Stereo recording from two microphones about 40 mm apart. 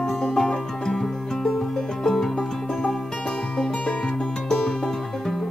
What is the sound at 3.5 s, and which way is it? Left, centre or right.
Music, left.